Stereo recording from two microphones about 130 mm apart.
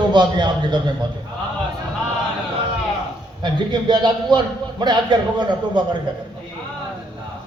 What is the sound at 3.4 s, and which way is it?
A man's voice, 35° right (ahead or behind).